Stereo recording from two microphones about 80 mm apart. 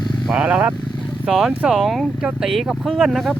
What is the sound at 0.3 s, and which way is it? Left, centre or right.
Speech, centre.